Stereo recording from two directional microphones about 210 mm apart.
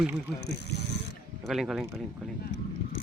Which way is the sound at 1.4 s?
Centre (ahead or behind).